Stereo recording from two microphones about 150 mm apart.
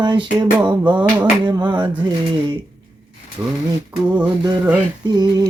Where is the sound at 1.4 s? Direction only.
30° right (ahead or behind).